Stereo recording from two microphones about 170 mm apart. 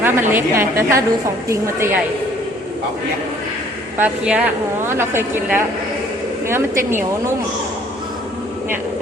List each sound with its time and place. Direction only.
0.0 s a woman's voice: 15° right (ahead or behind)
3.9 s a woman's voice: 10° right (ahead or behind)